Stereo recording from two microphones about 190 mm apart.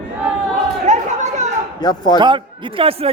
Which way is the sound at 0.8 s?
40° right (ahead or behind).